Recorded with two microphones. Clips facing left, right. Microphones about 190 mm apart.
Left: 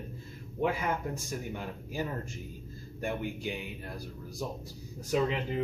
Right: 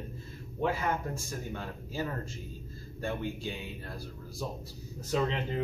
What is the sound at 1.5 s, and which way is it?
A man's voice, 15° left (ahead or behind).